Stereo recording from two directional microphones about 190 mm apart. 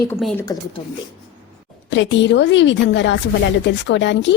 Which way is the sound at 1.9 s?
70° left (ahead or behind).